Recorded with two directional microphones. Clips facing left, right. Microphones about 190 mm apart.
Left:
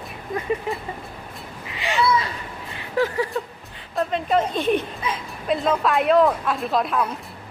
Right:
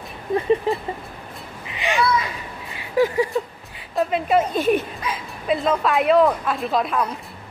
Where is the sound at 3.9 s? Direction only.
5° right (ahead or behind).